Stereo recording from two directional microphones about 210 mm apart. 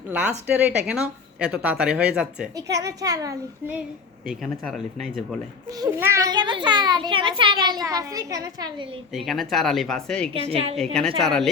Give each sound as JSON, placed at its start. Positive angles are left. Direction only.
{"t": 0.1, "sound": "a woman's voice", "side_deg": -10}
{"t": 2.6, "sound": "a woman's voice", "side_deg": -15}
{"t": 4.3, "sound": "speech", "side_deg": 0}
{"t": 5.8, "sound": "a child's voice", "side_deg": -15}
{"t": 9.1, "sound": "speech", "side_deg": 0}
{"t": 10.5, "sound": "a child's voice", "side_deg": -30}
{"t": 11.2, "sound": "speech", "side_deg": 0}